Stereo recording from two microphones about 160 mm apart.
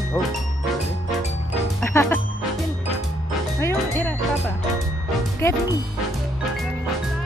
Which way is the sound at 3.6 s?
15° left (ahead or behind).